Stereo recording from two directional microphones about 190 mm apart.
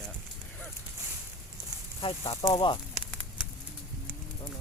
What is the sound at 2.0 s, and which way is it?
Speech, 30° left (ahead or behind).